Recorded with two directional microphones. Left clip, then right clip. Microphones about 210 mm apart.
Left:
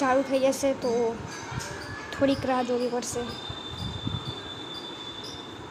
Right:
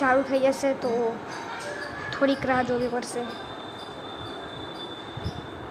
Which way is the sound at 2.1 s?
15° left (ahead or behind).